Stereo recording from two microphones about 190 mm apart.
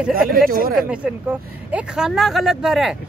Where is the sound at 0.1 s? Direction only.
50° right (ahead or behind).